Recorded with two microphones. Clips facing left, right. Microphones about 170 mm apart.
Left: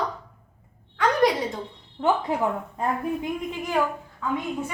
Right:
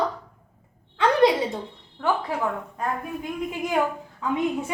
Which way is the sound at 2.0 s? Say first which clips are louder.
Left 2 dB; 20° left (ahead or behind).